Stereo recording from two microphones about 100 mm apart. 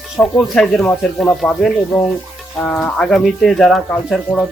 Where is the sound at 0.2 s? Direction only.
15° left (ahead or behind).